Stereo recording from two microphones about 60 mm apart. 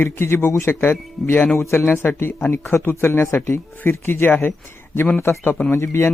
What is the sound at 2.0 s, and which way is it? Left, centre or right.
Speech, left.